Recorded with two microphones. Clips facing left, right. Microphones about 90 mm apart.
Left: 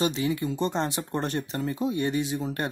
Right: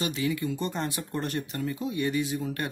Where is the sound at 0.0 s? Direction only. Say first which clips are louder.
Left 3 dB; 25° left (ahead or behind).